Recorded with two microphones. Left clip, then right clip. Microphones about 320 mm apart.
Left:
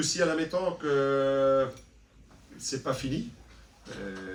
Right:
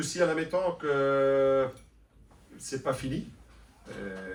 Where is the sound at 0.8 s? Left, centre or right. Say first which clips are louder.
Even; centre.